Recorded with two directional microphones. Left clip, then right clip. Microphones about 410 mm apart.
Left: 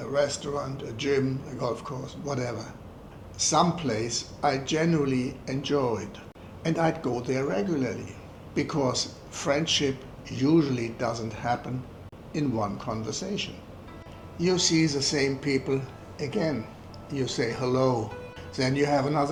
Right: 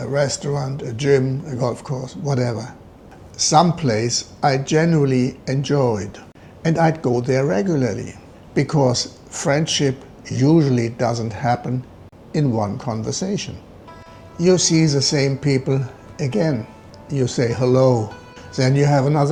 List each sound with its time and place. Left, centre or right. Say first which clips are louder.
0.0 s a man's voice: right 6 dB; right